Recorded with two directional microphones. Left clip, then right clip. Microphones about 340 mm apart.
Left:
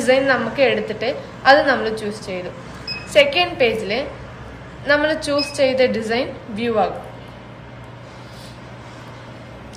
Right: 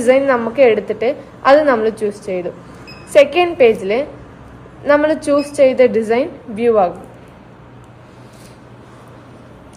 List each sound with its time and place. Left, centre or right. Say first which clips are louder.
0.0 s a woman's voice: right 3 dB; centre